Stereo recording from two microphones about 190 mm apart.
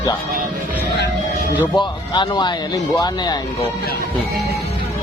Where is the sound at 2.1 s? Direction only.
20° left (ahead or behind).